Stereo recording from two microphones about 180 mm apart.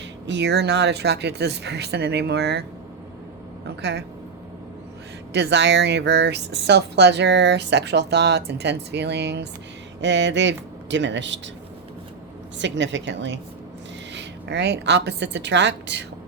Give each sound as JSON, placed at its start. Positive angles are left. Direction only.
{"t": 0.3, "sound": "speech", "side_deg": -75}
{"t": 3.8, "sound": "speech", "side_deg": -70}
{"t": 5.3, "sound": "speech", "side_deg": -75}
{"t": 10.0, "sound": "speech", "side_deg": -80}
{"t": 12.5, "sound": "a woman's voice", "side_deg": -85}
{"t": 14.1, "sound": "a woman's voice", "side_deg": -80}